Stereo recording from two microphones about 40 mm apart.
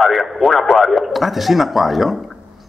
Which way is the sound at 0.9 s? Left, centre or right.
Centre.